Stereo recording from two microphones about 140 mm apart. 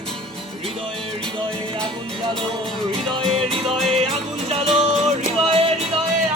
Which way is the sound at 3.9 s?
45° right (ahead or behind).